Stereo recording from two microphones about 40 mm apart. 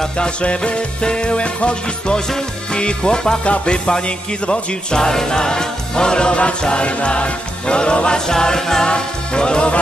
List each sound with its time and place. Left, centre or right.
0.0 s music: left